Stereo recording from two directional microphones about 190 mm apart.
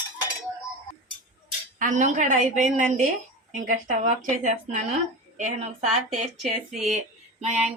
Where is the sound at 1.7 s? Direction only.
40° right (ahead or behind).